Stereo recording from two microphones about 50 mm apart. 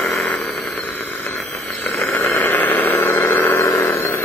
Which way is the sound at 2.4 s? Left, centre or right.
Left.